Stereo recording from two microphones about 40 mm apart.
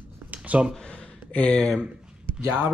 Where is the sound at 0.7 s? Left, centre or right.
Left.